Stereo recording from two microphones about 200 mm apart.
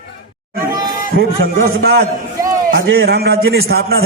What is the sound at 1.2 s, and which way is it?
A man's voice, 50° right (ahead or behind).